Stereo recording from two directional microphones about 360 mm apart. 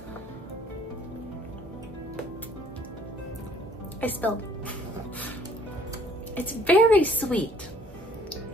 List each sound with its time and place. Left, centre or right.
4.0 s a woman's voice: centre
6.3 s a woman's voice: centre